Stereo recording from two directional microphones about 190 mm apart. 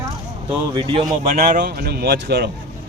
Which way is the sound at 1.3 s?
45° right (ahead or behind).